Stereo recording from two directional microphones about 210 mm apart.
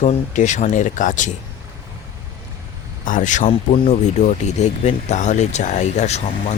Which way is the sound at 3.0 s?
40° left (ahead or behind).